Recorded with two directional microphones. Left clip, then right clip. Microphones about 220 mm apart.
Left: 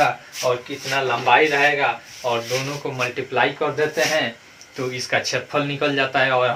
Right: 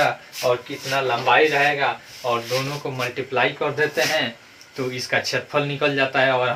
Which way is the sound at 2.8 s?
15° left (ahead or behind).